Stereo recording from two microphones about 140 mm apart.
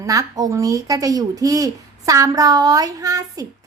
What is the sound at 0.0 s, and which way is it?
Speech, 25° right (ahead or behind).